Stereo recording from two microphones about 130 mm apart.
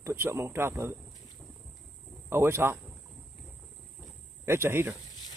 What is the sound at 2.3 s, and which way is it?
Speech, 20° right (ahead or behind).